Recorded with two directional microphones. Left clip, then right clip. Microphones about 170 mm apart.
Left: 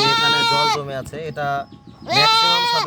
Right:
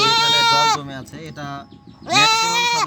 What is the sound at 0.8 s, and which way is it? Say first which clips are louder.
Speech: left 6 dB; 60° left (ahead or behind).